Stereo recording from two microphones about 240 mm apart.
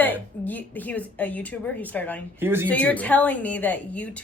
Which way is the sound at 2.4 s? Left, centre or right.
Centre.